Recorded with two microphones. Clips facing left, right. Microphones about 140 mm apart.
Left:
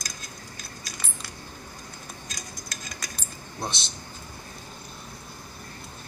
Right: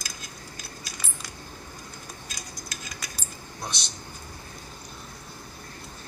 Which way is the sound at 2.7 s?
5° right (ahead or behind).